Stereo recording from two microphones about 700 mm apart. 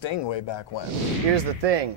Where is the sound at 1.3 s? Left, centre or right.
Right.